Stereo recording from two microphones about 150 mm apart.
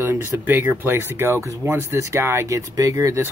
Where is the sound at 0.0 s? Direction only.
15° right (ahead or behind).